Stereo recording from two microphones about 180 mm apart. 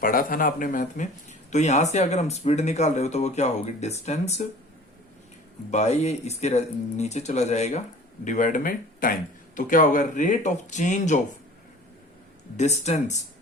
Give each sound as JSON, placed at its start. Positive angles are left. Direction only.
{"t": 0.0, "sound": "speech", "side_deg": 50}
{"t": 5.7, "sound": "speech", "side_deg": 40}
{"t": 12.5, "sound": "speech", "side_deg": 40}